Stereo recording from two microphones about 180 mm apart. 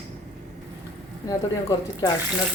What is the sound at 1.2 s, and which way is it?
Speech, 20° left (ahead or behind).